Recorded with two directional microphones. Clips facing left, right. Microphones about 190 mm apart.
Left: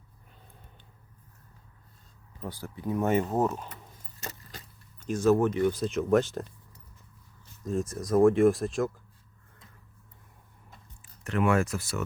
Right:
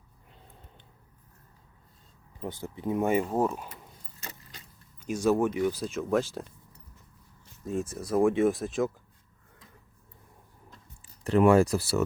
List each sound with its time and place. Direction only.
2.4 s speech: 20° right (ahead or behind)
3.4 s speech: 10° right (ahead or behind)
4.9 s speech: 10° right (ahead or behind)
7.6 s speech: 10° right (ahead or behind)
8.4 s speech: centre (ahead or behind)
11.2 s speech: 35° right (ahead or behind)